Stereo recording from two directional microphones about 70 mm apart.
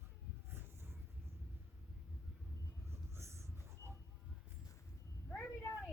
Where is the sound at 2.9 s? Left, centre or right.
Right.